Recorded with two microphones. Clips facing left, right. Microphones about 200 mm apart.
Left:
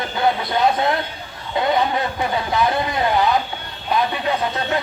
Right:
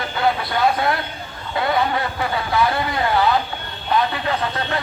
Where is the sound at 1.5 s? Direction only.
20° left (ahead or behind).